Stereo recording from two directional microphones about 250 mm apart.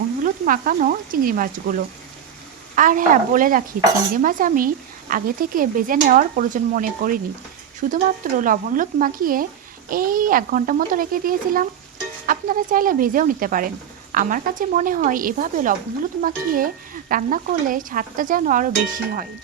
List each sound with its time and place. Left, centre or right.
0.3 s stir: right
2.7 s stir: right